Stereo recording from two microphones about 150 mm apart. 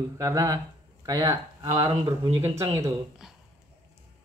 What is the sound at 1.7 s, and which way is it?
Speech, 35° right (ahead or behind).